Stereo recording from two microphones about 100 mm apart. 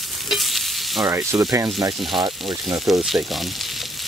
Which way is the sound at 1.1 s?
30° right (ahead or behind).